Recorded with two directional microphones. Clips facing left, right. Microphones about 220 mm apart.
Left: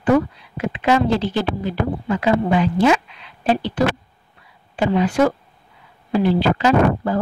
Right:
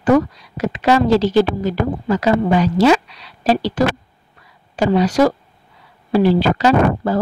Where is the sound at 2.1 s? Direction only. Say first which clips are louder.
Right 2 dB; 40° right (ahead or behind).